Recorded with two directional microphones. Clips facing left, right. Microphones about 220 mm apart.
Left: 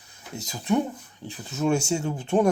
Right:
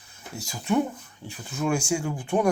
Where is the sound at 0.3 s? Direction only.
20° left (ahead or behind).